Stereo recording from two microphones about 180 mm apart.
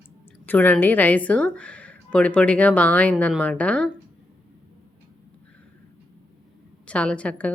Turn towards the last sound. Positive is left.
turn(degrees=5)  # may be behind; listen again after turning